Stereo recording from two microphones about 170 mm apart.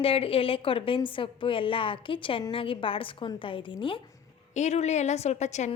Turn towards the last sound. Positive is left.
turn(degrees=45)  # may be behind; listen again after turning